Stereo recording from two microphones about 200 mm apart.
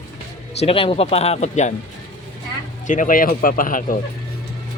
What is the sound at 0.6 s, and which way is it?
Speech, 30° left (ahead or behind).